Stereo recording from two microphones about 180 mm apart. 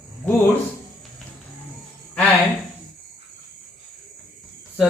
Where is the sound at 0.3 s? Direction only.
10° left (ahead or behind).